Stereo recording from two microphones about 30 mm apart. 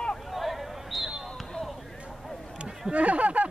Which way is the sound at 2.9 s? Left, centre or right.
Right.